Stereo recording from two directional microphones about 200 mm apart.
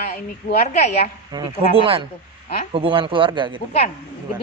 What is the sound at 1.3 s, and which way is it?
Speech, 20° right (ahead or behind).